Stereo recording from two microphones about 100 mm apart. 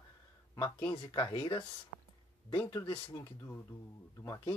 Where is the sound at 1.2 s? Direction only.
55° left (ahead or behind).